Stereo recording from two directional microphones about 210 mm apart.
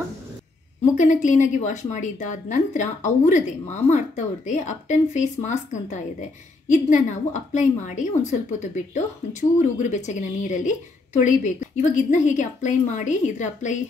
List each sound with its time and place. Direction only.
0.9 s speech: 35° left (ahead or behind)